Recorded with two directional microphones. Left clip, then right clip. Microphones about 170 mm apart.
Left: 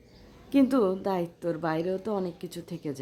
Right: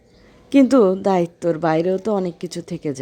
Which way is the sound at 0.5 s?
35° right (ahead or behind).